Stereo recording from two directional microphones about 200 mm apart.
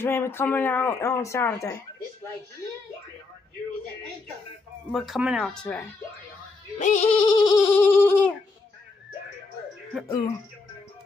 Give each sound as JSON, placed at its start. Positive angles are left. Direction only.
{"t": 0.0, "sound": "speech", "side_deg": 10}
{"t": 4.9, "sound": "speech", "side_deg": 0}
{"t": 6.8, "sound": "goat", "side_deg": 40}
{"t": 7.2, "sound": "speech", "side_deg": 20}
{"t": 10.0, "sound": "music", "side_deg": 20}